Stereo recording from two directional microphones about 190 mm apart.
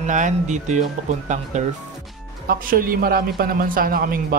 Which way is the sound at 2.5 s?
50° right (ahead or behind).